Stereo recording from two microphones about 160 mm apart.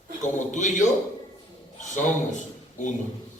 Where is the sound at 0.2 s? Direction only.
50° left (ahead or behind).